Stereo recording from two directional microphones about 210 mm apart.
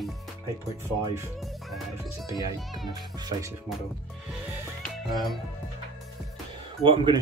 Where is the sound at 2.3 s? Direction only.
15° right (ahead or behind).